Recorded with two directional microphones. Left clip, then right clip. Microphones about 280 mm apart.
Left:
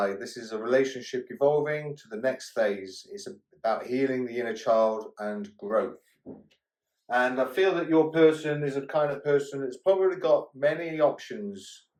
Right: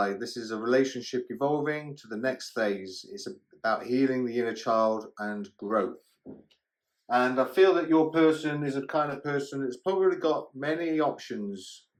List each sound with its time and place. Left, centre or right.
0.0 s speech: right
7.1 s speech: right